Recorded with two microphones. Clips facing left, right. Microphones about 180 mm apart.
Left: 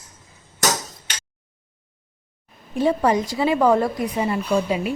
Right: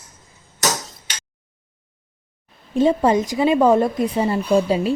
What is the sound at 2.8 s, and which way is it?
Speech, 20° right (ahead or behind).